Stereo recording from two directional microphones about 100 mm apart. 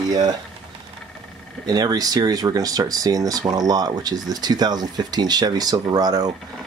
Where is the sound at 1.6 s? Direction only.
40° right (ahead or behind).